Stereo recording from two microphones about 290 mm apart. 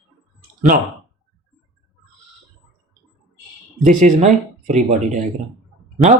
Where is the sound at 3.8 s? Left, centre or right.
Right.